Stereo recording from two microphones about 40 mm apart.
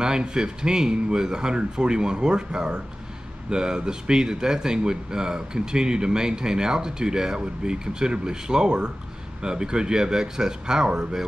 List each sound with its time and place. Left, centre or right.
0.0 s speech: centre